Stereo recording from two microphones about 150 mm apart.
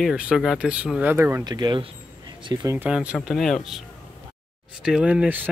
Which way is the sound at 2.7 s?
10° right (ahead or behind).